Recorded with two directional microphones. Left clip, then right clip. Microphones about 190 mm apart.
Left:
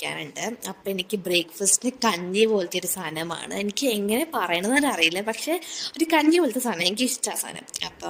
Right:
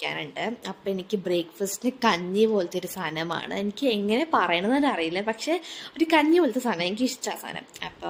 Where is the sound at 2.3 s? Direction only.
55° left (ahead or behind).